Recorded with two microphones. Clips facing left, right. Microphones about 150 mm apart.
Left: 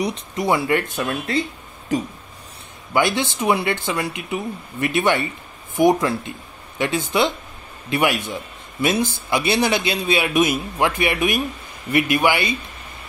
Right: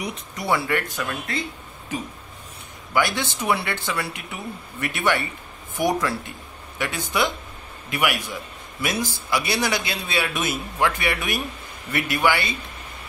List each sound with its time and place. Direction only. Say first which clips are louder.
0.0 s speech: left 7 dB; 30° left (ahead or behind)
0.5 s a man's voice: left 3 dB; 20° left (ahead or behind)
2.9 s a man's voice: left 4 dB; 20° left (ahead or behind)